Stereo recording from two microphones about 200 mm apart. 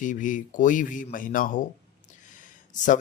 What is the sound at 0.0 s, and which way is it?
Speech, 40° left (ahead or behind).